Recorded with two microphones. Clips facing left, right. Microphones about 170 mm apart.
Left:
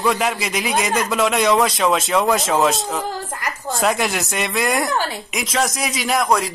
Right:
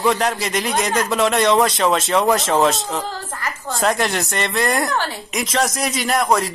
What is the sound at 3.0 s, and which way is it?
Speech, 15° left (ahead or behind).